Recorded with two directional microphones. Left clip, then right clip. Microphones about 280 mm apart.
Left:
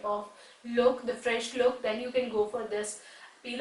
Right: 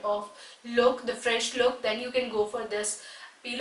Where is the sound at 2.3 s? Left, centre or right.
Centre.